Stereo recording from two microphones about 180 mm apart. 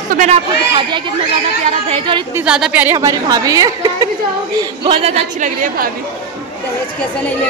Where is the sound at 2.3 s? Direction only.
5° right (ahead or behind); by 5.9 s 50° right (ahead or behind).